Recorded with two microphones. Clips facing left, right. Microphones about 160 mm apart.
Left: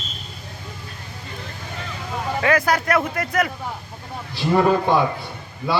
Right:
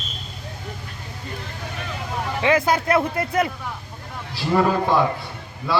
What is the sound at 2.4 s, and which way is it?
A man's voice, 25° right (ahead or behind).